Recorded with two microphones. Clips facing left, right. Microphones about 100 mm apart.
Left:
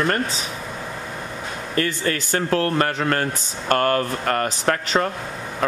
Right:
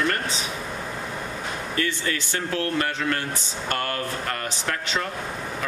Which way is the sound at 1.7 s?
45° left (ahead or behind).